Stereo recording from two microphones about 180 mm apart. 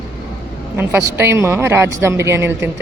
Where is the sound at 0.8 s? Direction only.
10° right (ahead or behind).